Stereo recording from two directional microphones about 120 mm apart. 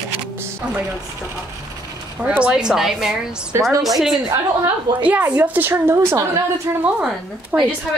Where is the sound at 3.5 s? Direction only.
20° right (ahead or behind).